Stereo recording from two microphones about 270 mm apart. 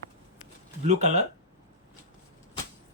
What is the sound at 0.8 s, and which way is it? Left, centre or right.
Speech, right.